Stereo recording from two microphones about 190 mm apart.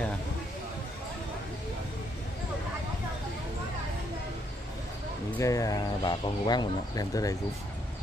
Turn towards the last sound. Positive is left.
turn(degrees=20)  # may be behind; listen again after turning